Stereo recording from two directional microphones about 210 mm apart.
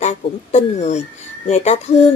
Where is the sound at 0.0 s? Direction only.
30° left (ahead or behind).